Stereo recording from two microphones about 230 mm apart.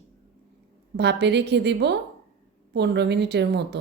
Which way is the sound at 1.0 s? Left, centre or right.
Right.